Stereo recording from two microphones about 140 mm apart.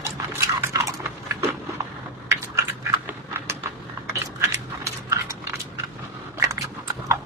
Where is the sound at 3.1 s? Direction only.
15° right (ahead or behind).